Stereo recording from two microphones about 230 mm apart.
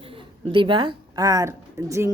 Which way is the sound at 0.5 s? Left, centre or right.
Right.